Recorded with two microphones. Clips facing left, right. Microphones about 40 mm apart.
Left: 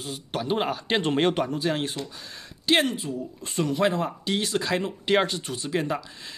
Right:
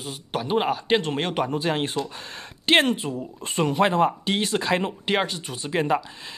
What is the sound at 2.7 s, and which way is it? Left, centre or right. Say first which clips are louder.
Speech: right 3 dB; right.